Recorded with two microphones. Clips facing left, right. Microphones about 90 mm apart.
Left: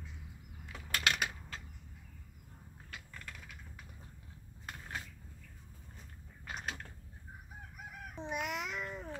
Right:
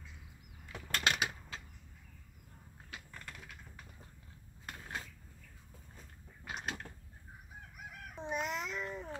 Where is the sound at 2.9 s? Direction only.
5° right (ahead or behind).